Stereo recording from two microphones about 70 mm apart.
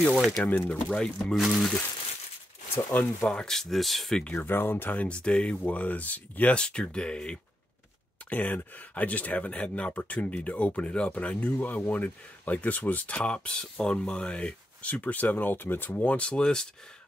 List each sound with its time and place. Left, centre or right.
0.4 s speech: centre
0.9 s speech: centre
2.9 s speech: left
3.3 s speech: centre
4.4 s speech: left; by 16.6 s centre